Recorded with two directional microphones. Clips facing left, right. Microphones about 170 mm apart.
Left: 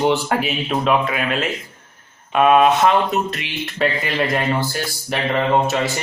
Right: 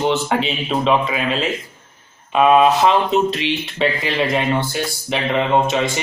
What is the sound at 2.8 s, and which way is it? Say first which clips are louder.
Speech: right 2 dB; 30° right (ahead or behind).